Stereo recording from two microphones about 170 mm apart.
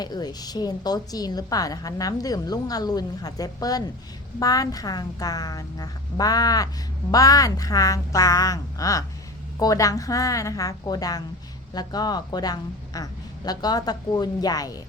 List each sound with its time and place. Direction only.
0.0 s a woman's voice: 25° left (ahead or behind)